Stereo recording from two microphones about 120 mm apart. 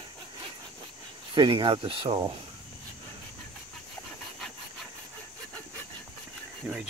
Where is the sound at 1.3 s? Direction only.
45° right (ahead or behind).